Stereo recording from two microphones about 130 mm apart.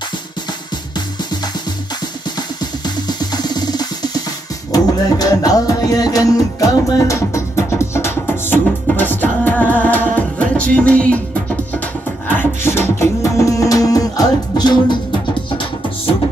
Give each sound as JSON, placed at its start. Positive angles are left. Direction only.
{"t": 2.6, "sound": "music", "side_deg": 30}
{"t": 12.3, "sound": "beatboxing", "side_deg": 15}